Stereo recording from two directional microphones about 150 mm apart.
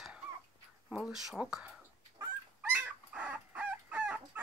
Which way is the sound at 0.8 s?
5° right (ahead or behind).